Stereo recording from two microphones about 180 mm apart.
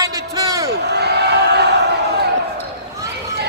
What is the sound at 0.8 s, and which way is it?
Crowd, 65° right (ahead or behind).